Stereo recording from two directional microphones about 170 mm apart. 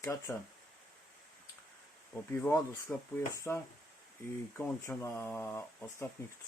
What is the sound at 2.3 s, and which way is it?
Mantra, 15° left (ahead or behind).